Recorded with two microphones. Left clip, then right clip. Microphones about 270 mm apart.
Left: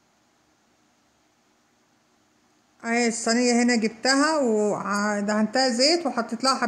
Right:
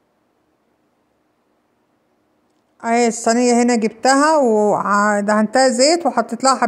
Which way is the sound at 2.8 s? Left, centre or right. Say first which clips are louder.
Right 8 dB; centre.